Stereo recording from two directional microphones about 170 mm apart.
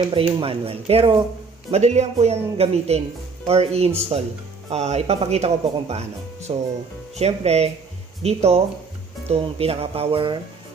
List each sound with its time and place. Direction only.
0.1 s speech: 35° right (ahead or behind)